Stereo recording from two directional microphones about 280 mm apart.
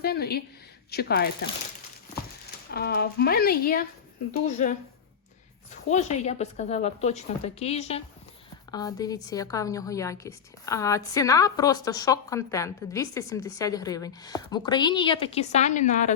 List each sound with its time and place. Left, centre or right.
0.0 s a woman's voice: left
2.6 s speech: left
5.9 s a woman's voice: left